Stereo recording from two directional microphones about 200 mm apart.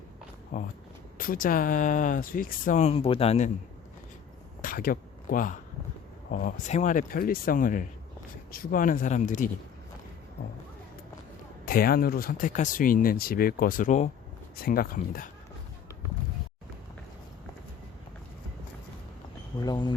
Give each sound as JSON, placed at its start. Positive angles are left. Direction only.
{"t": 0.5, "sound": "speech", "side_deg": 40}
{"t": 4.6, "sound": "speech", "side_deg": 45}
{"t": 11.6, "sound": "speech", "side_deg": 45}
{"t": 19.5, "sound": "speech", "side_deg": 20}